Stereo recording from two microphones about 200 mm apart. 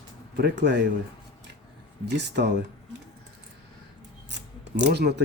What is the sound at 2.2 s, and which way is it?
Speech, 60° right (ahead or behind).